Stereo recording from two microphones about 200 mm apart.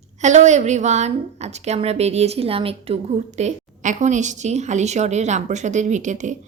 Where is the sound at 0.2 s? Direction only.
35° right (ahead or behind).